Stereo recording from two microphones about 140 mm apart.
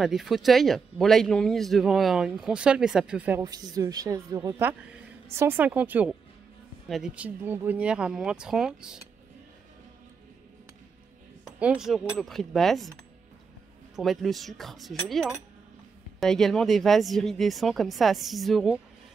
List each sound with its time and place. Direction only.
0.0 s speech: centre (ahead or behind)
3.3 s a woman's voice: 30° right (ahead or behind)
5.3 s speech: 15° right (ahead or behind)
11.6 s speech: 5° right (ahead or behind)
13.9 s speech: centre (ahead or behind)